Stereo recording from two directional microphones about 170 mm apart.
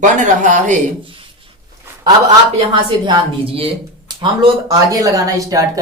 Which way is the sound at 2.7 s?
30° right (ahead or behind).